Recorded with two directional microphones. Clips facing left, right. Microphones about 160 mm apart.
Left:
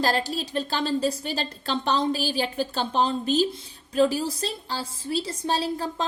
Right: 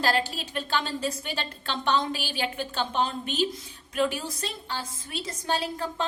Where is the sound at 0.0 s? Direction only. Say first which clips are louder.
Left 2 dB; 40° left (ahead or behind).